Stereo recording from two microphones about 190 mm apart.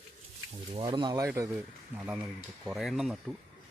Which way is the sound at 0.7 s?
25° right (ahead or behind).